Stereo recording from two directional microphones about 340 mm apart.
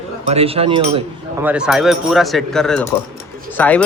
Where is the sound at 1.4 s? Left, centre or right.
Centre.